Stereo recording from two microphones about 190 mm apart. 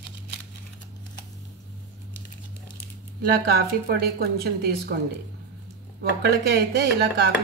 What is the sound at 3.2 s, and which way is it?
A woman's voice, 60° right (ahead or behind).